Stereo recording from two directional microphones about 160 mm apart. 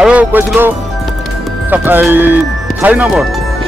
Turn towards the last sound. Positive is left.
turn(degrees=-10)  # may be behind; listen again after turning